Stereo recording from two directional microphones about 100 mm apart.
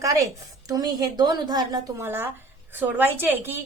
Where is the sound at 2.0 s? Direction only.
25° right (ahead or behind).